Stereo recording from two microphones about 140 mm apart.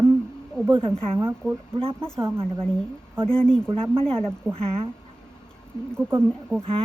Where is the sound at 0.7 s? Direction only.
40° right (ahead or behind).